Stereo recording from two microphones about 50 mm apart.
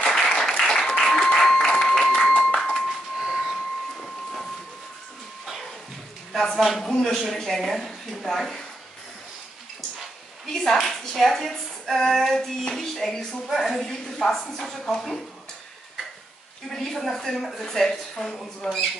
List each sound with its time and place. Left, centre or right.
0.0 s applause: centre
2.1 s a sound: centre
2.9 s a sound: centre
4.0 s train: centre
6.5 s speech: centre
10.4 s a woman's voice: centre
16.7 s a woman's voice: centre